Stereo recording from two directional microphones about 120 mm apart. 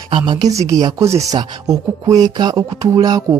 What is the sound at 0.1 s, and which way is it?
Speech, 35° right (ahead or behind).